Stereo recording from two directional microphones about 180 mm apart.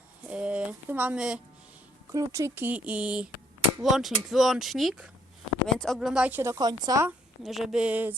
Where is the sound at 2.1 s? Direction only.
20° right (ahead or behind).